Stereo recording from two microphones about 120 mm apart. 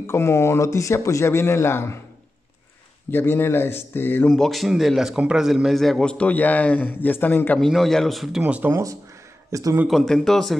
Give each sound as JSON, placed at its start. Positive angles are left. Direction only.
{"t": 0.0, "sound": "speech", "side_deg": 20}
{"t": 3.1, "sound": "speech", "side_deg": 15}
{"t": 4.3, "sound": "a man's voice", "side_deg": 0}
{"t": 7.6, "sound": "a man's voice", "side_deg": 0}
{"t": 8.4, "sound": "speech", "side_deg": -10}
{"t": 9.5, "sound": "a man's voice", "side_deg": -30}
{"t": 9.8, "sound": "a man's voice", "side_deg": 5}